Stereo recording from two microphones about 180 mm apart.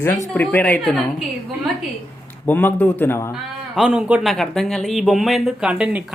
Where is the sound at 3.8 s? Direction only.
5° right (ahead or behind).